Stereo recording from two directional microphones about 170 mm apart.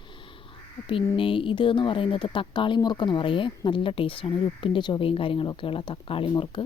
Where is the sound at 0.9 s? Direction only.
30° left (ahead or behind).